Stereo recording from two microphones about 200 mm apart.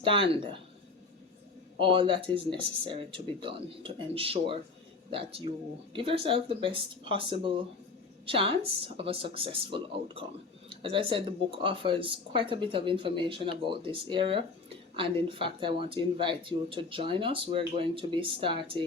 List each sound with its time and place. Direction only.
0.0 s speech: 25° right (ahead or behind)
1.8 s speech: 25° right (ahead or behind)